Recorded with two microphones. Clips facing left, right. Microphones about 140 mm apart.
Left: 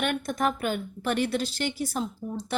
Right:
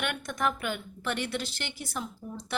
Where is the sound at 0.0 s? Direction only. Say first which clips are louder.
Left 4 dB; 40° left (ahead or behind).